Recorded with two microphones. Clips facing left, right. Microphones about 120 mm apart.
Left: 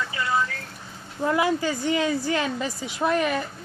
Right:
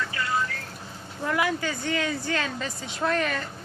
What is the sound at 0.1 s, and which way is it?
Rain on surface, 20° left (ahead or behind).